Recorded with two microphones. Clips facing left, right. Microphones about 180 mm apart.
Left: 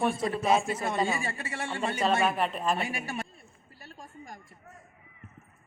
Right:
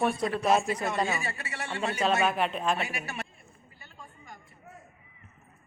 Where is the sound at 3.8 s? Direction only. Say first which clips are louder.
Left 5 dB; 40° left (ahead or behind).